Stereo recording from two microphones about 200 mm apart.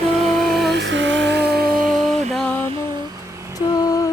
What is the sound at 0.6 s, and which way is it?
Music, 60° right (ahead or behind).